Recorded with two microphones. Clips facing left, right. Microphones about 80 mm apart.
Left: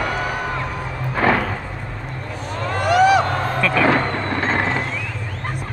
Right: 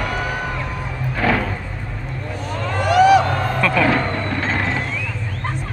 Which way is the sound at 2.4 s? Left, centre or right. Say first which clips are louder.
Even; centre.